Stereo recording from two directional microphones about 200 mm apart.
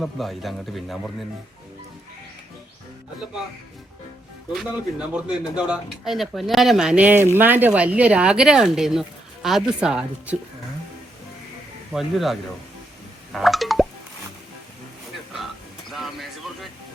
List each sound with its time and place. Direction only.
0.0 s speech: centre (ahead or behind)
4.5 s speech: 5° right (ahead or behind)
11.9 s speech: centre (ahead or behind)
13.3 s plop: centre (ahead or behind)
15.9 s a sound: centre (ahead or behind)